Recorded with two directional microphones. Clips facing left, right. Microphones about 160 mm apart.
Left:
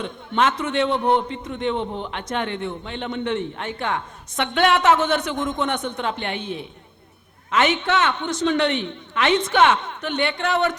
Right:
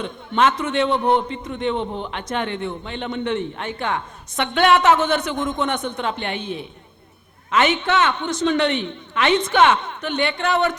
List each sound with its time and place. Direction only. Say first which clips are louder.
0.0 s a man's voice: right 2 dB; 10° right (ahead or behind)
1.8 s a man's voice: right 1 dB; 40° right (ahead or behind)
2.0 s a man's voice: right 1 dB; 10° right (ahead or behind)